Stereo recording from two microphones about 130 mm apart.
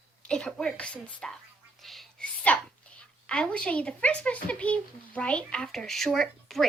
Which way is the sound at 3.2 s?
5° left (ahead or behind).